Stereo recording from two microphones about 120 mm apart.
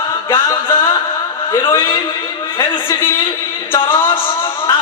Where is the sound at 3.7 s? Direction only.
20° left (ahead or behind).